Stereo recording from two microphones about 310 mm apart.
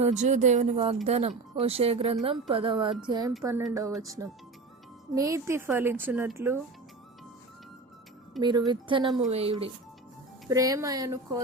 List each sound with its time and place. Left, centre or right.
0.0 s a woman's voice: right
8.4 s a woman's voice: centre